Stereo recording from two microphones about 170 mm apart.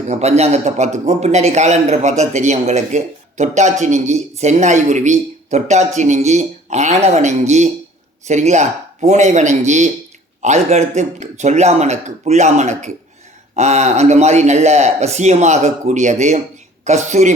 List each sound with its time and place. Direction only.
0.1 s speech: 40° right (ahead or behind)